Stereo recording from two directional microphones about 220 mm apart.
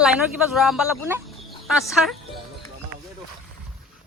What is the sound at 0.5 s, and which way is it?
Speech, centre (ahead or behind).